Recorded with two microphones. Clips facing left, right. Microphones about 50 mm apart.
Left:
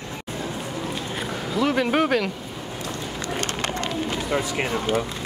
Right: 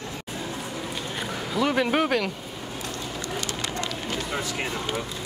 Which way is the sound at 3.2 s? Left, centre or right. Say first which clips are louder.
Left 5 dB; left.